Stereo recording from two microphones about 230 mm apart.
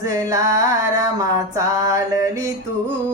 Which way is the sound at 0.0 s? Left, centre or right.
Centre.